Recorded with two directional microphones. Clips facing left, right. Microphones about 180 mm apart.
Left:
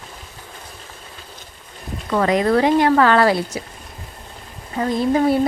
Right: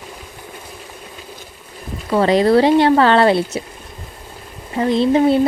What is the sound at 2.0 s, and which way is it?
Speech, 30° right (ahead or behind).